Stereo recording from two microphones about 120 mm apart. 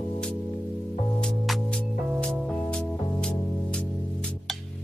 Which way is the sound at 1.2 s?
5° left (ahead or behind).